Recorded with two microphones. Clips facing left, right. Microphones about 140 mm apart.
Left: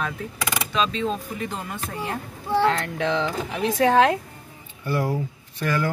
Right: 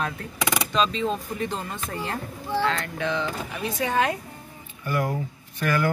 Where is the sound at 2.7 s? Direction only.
80° left.